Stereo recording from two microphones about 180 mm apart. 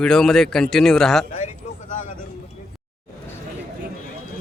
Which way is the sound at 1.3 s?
40° left (ahead or behind).